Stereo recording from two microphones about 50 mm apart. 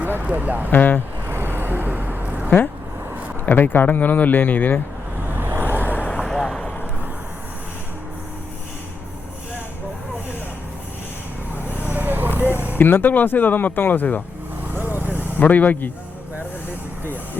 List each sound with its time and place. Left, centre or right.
0.2 s speech: right
0.7 s speech: left
1.3 s vehicle: right
3.4 s speech: left
5.3 s vehicle: right
5.8 s vehicle: left
6.2 s vehicle: centre
11.7 s vehicle: right
12.7 s speech: left
14.7 s vehicle: right
15.4 s speech: left